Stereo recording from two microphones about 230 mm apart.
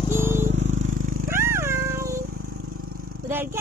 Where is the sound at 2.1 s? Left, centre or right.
Right.